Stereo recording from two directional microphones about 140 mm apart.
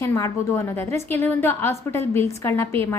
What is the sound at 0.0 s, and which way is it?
A woman's voice, 20° left (ahead or behind).